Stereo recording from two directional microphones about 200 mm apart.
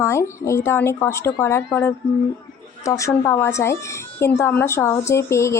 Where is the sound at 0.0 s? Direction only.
15° left (ahead or behind).